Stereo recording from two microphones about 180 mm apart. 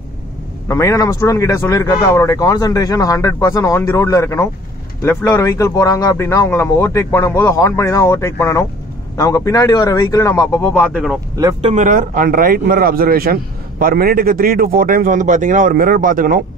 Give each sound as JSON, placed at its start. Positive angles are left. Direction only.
{"t": 0.7, "sound": "speech", "side_deg": 15}
{"t": 11.6, "sound": "a man's voice", "side_deg": -40}